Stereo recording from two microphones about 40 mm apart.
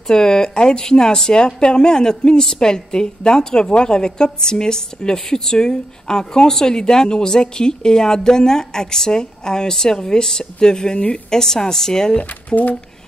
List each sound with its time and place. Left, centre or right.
0.0 s speech: centre
12.2 s speech: left